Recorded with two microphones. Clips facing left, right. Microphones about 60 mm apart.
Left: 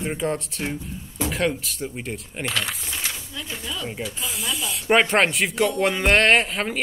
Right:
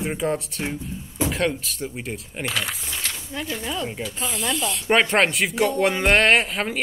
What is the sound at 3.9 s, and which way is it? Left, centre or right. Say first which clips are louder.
Speech: right 1 dB; centre.